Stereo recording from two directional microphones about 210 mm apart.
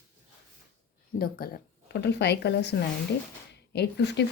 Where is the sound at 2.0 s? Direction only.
55° left (ahead or behind).